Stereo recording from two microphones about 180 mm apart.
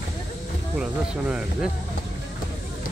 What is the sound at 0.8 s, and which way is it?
Speech, 5° right (ahead or behind).